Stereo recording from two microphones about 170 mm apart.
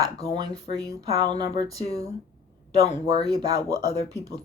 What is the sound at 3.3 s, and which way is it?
Speech, 20° right (ahead or behind).